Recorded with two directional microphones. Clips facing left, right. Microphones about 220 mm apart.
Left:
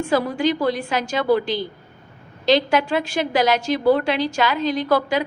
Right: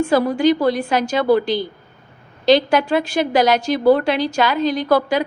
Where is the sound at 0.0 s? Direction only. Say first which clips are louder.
Right 4 dB; 40° right (ahead or behind).